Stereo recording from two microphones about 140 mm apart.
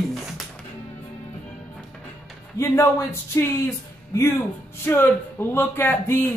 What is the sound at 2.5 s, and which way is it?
Speech, 20° left (ahead or behind).